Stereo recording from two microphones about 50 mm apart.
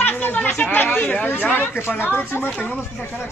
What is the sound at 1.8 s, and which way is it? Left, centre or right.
Speech, left.